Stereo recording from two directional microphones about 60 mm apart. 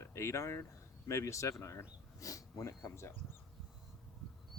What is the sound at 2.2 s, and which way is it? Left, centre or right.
Speech, left.